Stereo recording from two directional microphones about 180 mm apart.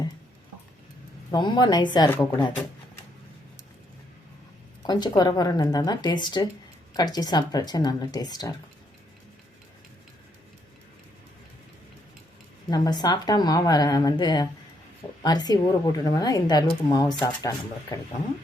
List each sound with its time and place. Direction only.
1.3 s a woman's voice: 25° left (ahead or behind)
4.8 s a woman's voice: 25° left (ahead or behind)
12.7 s a woman's voice: 25° left (ahead or behind)